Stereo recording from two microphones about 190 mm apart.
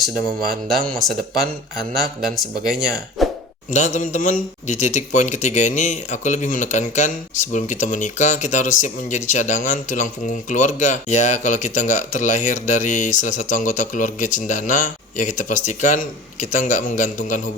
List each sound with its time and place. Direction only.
0.9 s speech: centre (ahead or behind)
3.7 s a man's voice: 40° left (ahead or behind)